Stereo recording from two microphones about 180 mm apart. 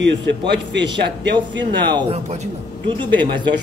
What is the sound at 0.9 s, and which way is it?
Speech, 70° right (ahead or behind).